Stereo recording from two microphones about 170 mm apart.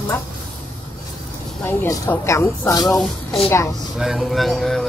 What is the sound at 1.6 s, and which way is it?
Speech, 20° left (ahead or behind).